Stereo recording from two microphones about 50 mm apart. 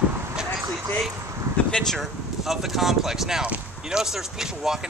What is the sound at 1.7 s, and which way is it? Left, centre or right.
Speech, centre.